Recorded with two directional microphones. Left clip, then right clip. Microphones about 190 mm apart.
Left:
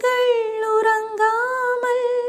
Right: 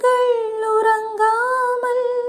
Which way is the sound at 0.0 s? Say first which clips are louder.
Right 2 dB; 10° left (ahead or behind).